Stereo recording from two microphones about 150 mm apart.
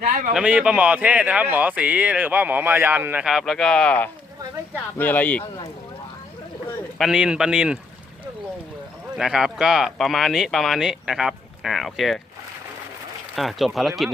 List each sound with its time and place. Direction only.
0.0 s a sound: 65° right (ahead or behind)
0.3 s speech: 5° right (ahead or behind); by 5.5 s 10° left (ahead or behind)
7.0 s speech: 5° right (ahead or behind)
9.1 s speech: 5° right (ahead or behind)
13.3 s speech: centre (ahead or behind)